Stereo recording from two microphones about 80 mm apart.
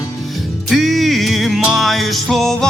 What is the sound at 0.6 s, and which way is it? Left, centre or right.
Music, centre.